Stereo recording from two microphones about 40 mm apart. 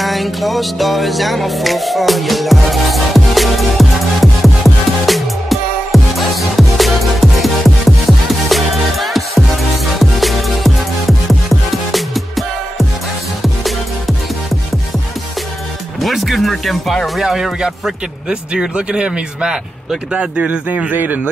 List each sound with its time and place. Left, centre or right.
0.0 s music: centre
16.0 s music: centre
17.2 s speech: centre
18.3 s speech: right
20.9 s speech: right